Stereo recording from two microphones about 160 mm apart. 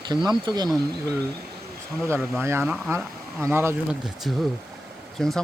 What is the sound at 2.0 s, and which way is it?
Speech, 15° right (ahead or behind).